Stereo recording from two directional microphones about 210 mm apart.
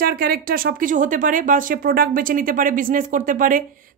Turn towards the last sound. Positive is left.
turn(degrees=-40)  # may be behind; listen again after turning